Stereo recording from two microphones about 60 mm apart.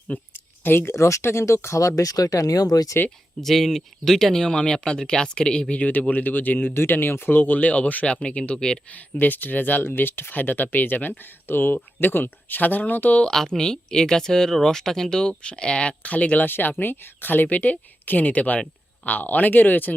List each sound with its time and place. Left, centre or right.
0.3 s a sound: left
0.9 s speech: left
2.0 s speech: left
3.4 s speech: centre
9.1 s speech: left
13.2 s speech: centre; by 19.9 s left